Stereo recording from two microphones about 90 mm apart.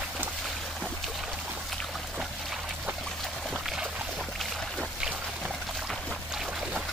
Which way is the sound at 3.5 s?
10° right (ahead or behind).